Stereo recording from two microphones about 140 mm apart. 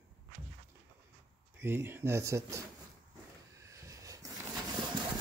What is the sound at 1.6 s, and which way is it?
Speech, 15° right (ahead or behind).